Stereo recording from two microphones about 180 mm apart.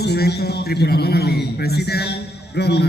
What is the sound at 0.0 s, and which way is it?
A man's voice, 65° left (ahead or behind).